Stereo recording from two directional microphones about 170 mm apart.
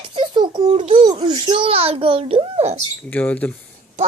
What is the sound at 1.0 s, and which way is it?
A child's voice, 25° right (ahead or behind).